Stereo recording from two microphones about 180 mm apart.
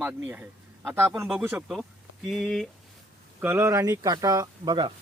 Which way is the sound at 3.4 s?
15° right (ahead or behind).